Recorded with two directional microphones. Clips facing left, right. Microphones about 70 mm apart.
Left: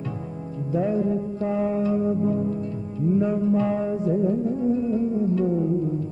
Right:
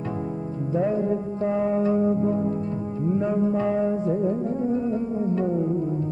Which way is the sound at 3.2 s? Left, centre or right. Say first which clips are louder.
Left 1 dB; right.